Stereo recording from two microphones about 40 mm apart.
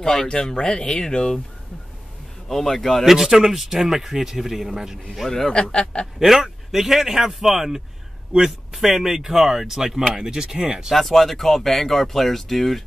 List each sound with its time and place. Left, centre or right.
0.0 s speech: centre
2.4 s speech: centre
3.1 s a man's voice: centre
5.5 s speech: left
6.1 s a man's voice: centre
10.9 s speech: centre